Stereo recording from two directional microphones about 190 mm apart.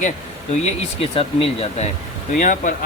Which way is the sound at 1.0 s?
30° left (ahead or behind).